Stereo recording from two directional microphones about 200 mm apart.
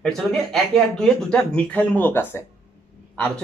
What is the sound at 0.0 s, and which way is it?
Speech, 5° left (ahead or behind).